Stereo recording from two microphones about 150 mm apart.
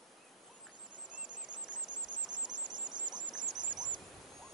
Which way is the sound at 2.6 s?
30° right (ahead or behind).